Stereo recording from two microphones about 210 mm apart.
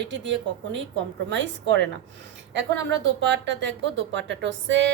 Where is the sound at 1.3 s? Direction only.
55° right (ahead or behind).